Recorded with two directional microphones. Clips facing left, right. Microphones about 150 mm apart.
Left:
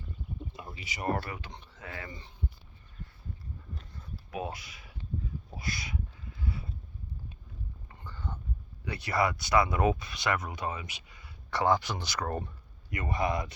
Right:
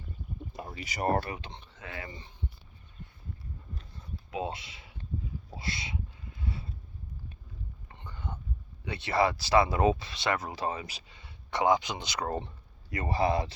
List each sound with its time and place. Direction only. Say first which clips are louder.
0.5 s speech: right 4 dB; 45° right (ahead or behind)
1.3 s speech: right 2 dB; 25° right (ahead or behind)
4.3 s speech: right 2 dB; 25° right (ahead or behind)
5.5 s a sound: even; 25° right (ahead or behind)
8.0 s whispering: even; 20° right (ahead or behind)
8.8 s speech: right 2 dB; 25° right (ahead or behind)